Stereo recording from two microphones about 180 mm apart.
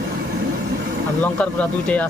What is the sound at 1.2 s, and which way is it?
Speech, 5° left (ahead or behind).